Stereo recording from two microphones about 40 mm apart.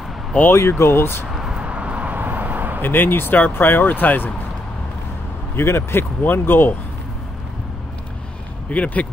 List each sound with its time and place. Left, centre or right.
0.5 s speech: left
1.3 s a sound: centre
1.6 s a sound: right
2.8 s speech: left
5.6 s speech: left
6.2 s speech: left
8.6 s speech: left